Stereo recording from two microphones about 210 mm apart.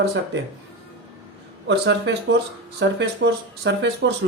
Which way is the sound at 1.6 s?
60° right (ahead or behind).